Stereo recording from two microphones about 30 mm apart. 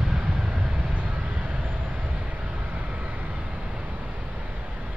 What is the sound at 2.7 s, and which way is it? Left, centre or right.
Vehicle, right.